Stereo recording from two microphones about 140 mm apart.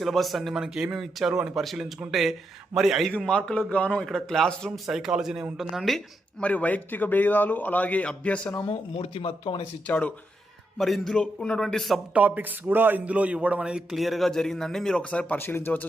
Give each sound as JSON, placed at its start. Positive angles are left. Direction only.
{"t": 0.0, "sound": "a man's voice", "side_deg": 0}
{"t": 6.4, "sound": "a man's voice", "side_deg": 10}
{"t": 9.0, "sound": "speech", "side_deg": 45}
{"t": 9.8, "sound": "a man's voice", "side_deg": 10}
{"t": 12.1, "sound": "a man's voice", "side_deg": -10}